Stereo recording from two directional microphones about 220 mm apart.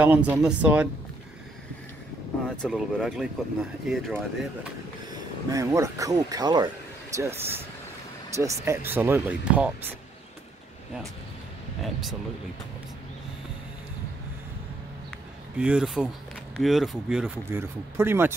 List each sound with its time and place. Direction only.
0.0 s speech: 5° right (ahead or behind)
2.5 s speech: centre (ahead or behind)
5.5 s speech: 15° right (ahead or behind)
11.8 s speech: centre (ahead or behind)
15.5 s speech: 5° right (ahead or behind)